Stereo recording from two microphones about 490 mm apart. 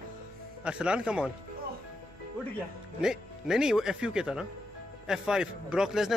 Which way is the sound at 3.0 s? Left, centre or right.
Centre.